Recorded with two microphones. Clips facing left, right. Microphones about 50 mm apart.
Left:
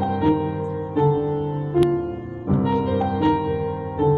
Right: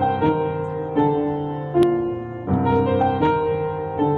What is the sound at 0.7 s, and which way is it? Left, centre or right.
Music, right.